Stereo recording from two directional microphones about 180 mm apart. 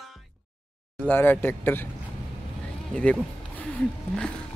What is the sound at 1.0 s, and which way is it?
Speech, 10° left (ahead or behind).